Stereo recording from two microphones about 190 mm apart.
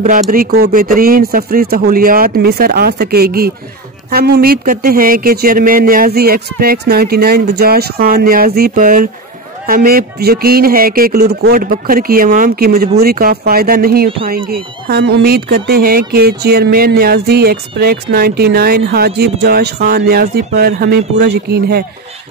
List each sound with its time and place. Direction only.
0.0 s speech: 45° right (ahead or behind)